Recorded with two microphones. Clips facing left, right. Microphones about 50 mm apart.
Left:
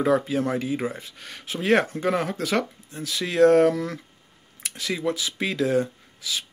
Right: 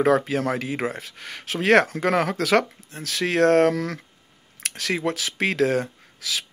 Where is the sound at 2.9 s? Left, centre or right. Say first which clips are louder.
Right 4 dB; right.